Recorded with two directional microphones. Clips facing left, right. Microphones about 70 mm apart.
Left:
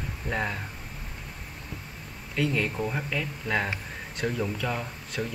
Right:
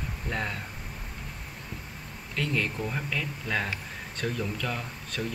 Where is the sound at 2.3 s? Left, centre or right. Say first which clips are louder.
Left 3 dB; centre.